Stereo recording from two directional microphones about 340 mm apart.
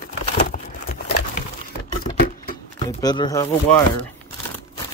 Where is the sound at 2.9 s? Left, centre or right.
Centre.